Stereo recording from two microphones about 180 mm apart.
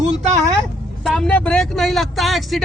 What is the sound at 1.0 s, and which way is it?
Speech, 5° left (ahead or behind).